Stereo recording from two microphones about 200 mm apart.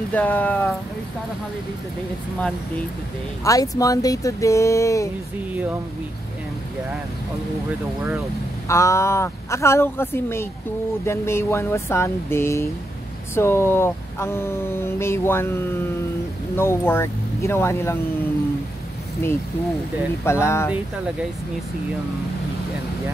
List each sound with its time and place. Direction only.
0.1 s speech: 10° left (ahead or behind)
3.4 s speech: 15° left (ahead or behind)
8.6 s speech: 15° left (ahead or behind)
19.2 s speech: 10° left (ahead or behind)